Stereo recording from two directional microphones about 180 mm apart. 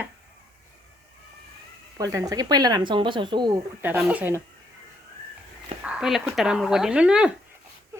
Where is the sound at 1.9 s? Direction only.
20° right (ahead or behind).